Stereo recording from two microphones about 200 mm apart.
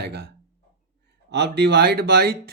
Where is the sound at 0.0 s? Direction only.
55° right (ahead or behind).